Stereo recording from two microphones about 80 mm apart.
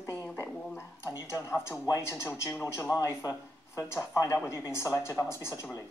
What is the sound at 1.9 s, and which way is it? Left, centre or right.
A woman's voice, left.